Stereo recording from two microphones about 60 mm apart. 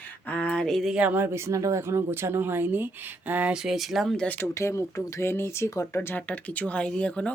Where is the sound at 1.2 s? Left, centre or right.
Right.